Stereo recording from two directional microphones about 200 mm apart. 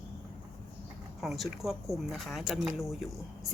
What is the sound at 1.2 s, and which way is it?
Speech, centre (ahead or behind).